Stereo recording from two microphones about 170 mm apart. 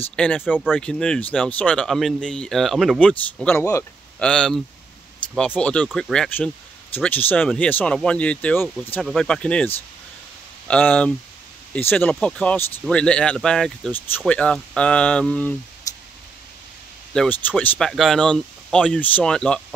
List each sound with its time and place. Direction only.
0.1 s speech: 5° left (ahead or behind)
3.5 s speech: 15° left (ahead or behind)
4.2 s speech: 5° left (ahead or behind)
10.7 s speech: 10° left (ahead or behind)
17.1 s speech: 5° left (ahead or behind)